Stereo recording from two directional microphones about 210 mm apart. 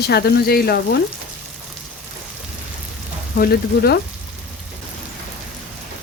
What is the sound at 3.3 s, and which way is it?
Speech, 45° left (ahead or behind).